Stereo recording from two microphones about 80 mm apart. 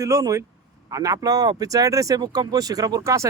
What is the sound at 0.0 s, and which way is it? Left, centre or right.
Speech, right.